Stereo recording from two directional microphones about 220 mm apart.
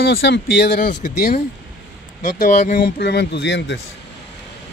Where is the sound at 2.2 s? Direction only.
35° left (ahead or behind).